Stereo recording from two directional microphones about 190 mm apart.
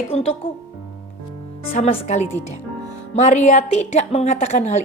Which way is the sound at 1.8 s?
35° left (ahead or behind).